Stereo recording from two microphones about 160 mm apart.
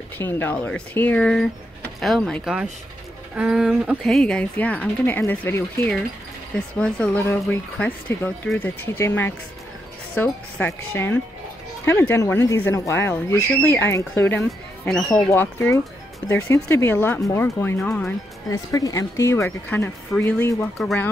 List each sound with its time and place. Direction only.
0.2 s speech: 15° left (ahead or behind); by 4.0 s 10° right (ahead or behind)
4.0 s speech: 5° left (ahead or behind)
14.9 s speech: centre (ahead or behind)
15.2 s speech: 15° left (ahead or behind)
18.5 s speech: 20° left (ahead or behind)